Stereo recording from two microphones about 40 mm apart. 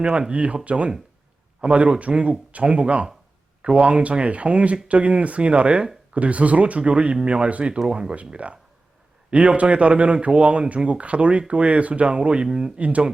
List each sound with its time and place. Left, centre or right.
0.0 s speech: right
8.3 s speech: right